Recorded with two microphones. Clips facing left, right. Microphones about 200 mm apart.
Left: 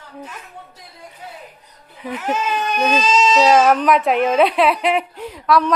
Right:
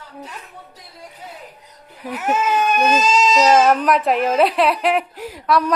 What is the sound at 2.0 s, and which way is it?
A woman's voice, 5° right (ahead or behind).